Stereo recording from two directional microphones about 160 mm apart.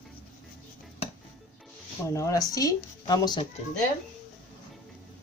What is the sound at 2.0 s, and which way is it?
Speech, 20° left (ahead or behind).